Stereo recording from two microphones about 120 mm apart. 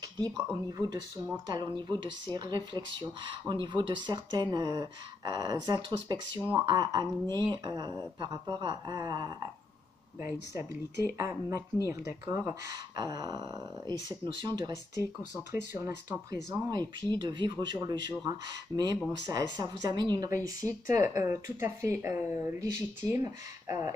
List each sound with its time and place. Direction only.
0.7 s speech: 35° right (ahead or behind)
10.2 s speech: 25° right (ahead or behind)
12.7 s speech: 35° right (ahead or behind)
15.5 s speech: 20° right (ahead or behind); by 20.2 s 35° right (ahead or behind)
20.2 s speech: 25° right (ahead or behind)